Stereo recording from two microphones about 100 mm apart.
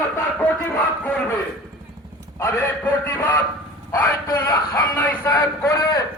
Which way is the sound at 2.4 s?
25° left (ahead or behind).